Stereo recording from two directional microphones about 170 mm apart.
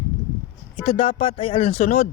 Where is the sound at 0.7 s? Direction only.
35° left (ahead or behind).